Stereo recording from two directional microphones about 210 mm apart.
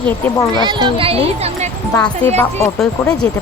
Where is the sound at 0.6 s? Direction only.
20° right (ahead or behind).